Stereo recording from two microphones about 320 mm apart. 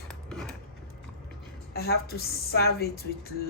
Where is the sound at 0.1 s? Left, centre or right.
Centre.